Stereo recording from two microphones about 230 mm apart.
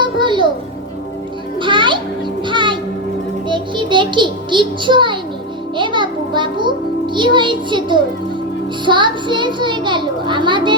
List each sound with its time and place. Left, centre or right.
0.0 s music: right
1.5 s music: right
3.5 s a sound: right
5.7 s music: right
8.8 s a child's voice: right